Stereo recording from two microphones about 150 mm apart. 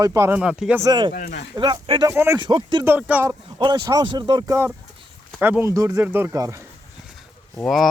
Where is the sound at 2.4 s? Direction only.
30° right (ahead or behind).